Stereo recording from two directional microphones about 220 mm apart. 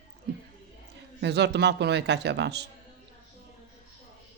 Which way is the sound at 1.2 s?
50° right (ahead or behind).